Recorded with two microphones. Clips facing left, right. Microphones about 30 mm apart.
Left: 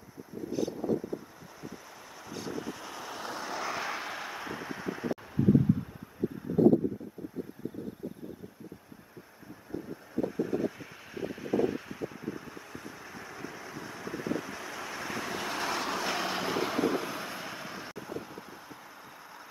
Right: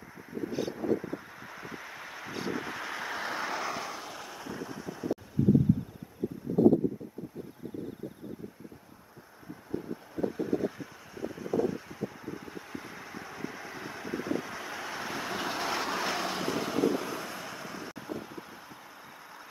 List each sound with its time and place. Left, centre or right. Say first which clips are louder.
0.5 s vehicle: even; right
3.5 s vehicle: even; centre
3.8 s a sound: left 4 dB; centre
10.1 s vehicle: even; centre
10.8 s mechanical fan: left 1 dB; centre
12.4 s vehicle: right 2 dB; centre
17.9 s vehicle: right 1 dB; centre